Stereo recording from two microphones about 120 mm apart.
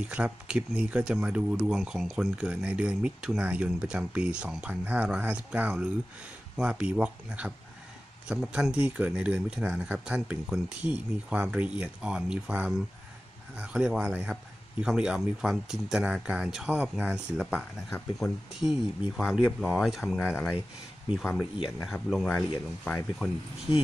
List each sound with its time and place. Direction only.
0.0 s speech: 10° right (ahead or behind)
20.2 s speech: 15° left (ahead or behind)
21.8 s speech: centre (ahead or behind)